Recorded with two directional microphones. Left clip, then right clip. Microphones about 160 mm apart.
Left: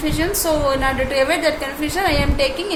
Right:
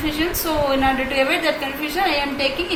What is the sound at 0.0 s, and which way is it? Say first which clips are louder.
A woman's voice: left 2 dB; 50° left (ahead or behind).